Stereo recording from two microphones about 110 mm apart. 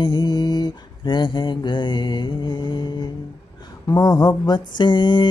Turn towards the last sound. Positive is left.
turn(degrees=40)  # may be behind; listen again after turning